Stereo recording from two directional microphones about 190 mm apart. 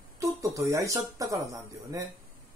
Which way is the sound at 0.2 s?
15° right (ahead or behind).